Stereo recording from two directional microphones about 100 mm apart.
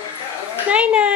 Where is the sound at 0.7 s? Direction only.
10° right (ahead or behind).